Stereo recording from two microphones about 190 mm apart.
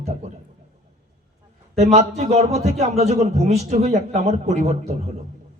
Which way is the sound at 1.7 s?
35° right (ahead or behind).